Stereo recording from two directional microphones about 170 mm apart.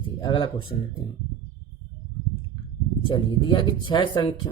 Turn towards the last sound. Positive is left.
turn(degrees=30)  # may be behind; listen again after turning